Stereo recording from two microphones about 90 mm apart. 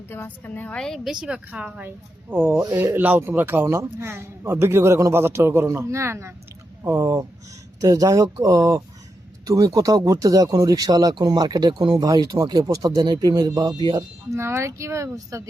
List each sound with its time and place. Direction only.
0.1 s a woman's voice: 25° left (ahead or behind)
1.2 s a woman's voice: 10° right (ahead or behind)
2.3 s a man's voice: 25° right (ahead or behind)
7.8 s speech: 40° right (ahead or behind)
14.3 s speech: 30° right (ahead or behind)